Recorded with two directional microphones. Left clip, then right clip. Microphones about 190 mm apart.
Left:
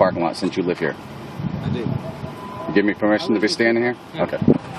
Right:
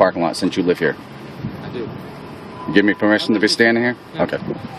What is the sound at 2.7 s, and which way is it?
Speech, 50° right (ahead or behind).